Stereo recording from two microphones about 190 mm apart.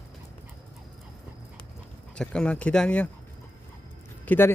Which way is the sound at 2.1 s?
5° left (ahead or behind).